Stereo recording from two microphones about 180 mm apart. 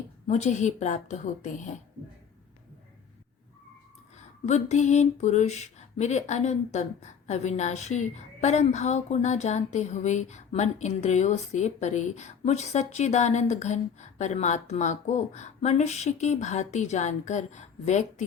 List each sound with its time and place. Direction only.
0.3 s speech: 40° left (ahead or behind)
4.4 s speech: 40° left (ahead or behind)